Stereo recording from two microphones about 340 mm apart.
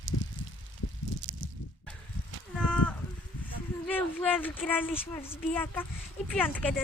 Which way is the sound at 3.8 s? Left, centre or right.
Centre.